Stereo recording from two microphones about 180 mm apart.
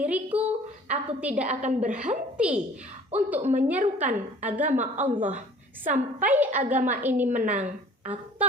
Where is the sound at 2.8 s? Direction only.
40° right (ahead or behind).